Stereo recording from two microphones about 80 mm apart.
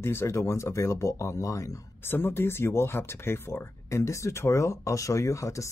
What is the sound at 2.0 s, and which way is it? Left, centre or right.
Speech, left.